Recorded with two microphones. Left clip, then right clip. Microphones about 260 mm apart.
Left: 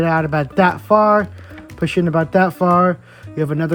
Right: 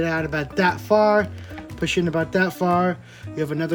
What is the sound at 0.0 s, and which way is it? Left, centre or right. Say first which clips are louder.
Speech: left 6 dB; centre.